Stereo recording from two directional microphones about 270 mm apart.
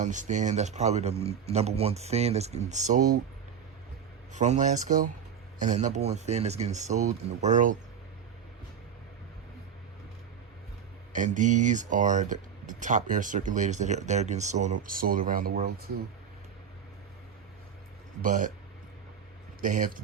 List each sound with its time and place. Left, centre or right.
0.0 s speech: right
4.3 s speech: right
11.1 s speech: right
18.2 s speech: right
19.6 s speech: right